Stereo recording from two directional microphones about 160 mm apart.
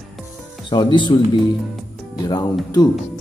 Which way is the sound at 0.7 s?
30° left (ahead or behind).